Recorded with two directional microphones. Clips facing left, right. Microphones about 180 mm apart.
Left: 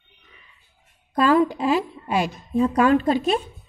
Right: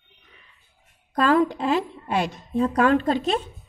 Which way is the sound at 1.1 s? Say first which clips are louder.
Left 2 dB; 5° left (ahead or behind).